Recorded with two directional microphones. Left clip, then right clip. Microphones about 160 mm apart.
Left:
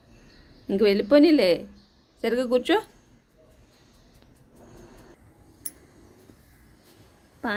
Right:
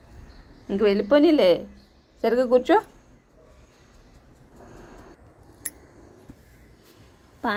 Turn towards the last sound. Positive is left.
turn(degrees=15)  # may be behind; listen again after turning